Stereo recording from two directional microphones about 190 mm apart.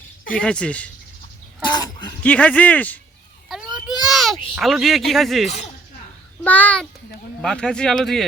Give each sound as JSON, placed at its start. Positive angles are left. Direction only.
{"t": 0.3, "sound": "speech", "side_deg": 5}
{"t": 1.6, "sound": "speech", "side_deg": 20}
{"t": 2.2, "sound": "speech", "side_deg": 5}
{"t": 3.5, "sound": "a sound", "side_deg": 0}
{"t": 4.1, "sound": "speech", "side_deg": 0}
{"t": 5.5, "sound": "speech", "side_deg": 35}
{"t": 6.4, "sound": "speech", "side_deg": 10}